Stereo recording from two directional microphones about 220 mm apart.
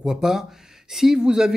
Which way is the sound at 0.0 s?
Centre (ahead or behind).